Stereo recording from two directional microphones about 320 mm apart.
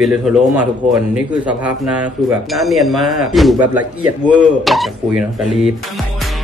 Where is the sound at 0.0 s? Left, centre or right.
Centre.